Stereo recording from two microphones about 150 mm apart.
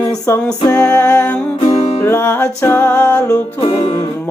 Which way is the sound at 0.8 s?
10° left (ahead or behind).